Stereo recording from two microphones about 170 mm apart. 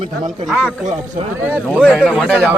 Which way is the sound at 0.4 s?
Centre (ahead or behind).